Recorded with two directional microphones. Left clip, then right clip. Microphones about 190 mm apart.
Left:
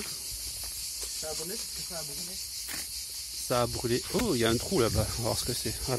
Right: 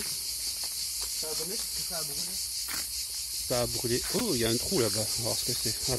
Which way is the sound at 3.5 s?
5° left (ahead or behind).